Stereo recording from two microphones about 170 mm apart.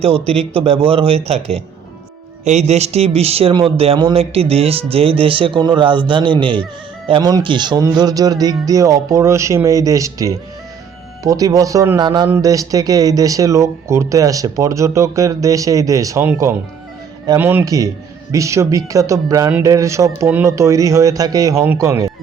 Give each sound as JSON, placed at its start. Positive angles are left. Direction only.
{"t": 0.0, "sound": "speech", "side_deg": -35}